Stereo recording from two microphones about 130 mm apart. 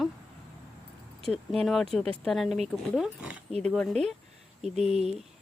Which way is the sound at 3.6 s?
5° left (ahead or behind).